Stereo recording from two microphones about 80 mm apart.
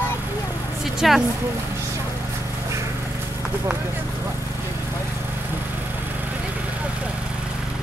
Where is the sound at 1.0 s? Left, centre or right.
Centre.